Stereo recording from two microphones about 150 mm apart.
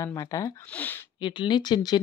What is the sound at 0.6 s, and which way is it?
Speech, 10° left (ahead or behind).